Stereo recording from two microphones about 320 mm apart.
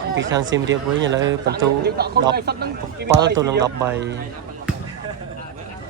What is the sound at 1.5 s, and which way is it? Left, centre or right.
Speech, right.